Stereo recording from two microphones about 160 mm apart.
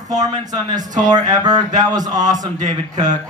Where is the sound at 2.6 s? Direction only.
50° right (ahead or behind).